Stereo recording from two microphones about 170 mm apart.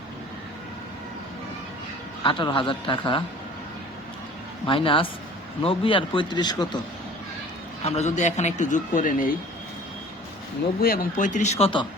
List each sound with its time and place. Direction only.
2.2 s speech: 30° left (ahead or behind)
4.6 s speech: 30° left (ahead or behind)
7.9 s a man's voice: 40° left (ahead or behind)
10.8 s a man's voice: 60° left (ahead or behind); by 11.9 s 35° left (ahead or behind)